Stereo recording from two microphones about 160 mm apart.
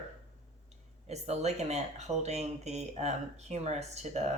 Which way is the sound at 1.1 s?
45° right (ahead or behind).